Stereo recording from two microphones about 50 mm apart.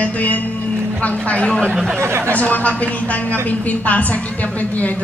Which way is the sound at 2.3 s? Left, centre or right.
Left.